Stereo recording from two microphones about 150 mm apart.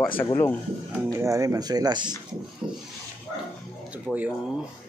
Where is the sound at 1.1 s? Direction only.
20° right (ahead or behind).